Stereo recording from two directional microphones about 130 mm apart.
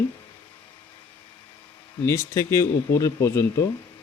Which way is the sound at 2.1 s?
20° left (ahead or behind).